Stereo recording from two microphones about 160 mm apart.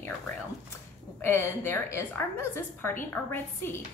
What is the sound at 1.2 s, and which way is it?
Speech, 15° left (ahead or behind).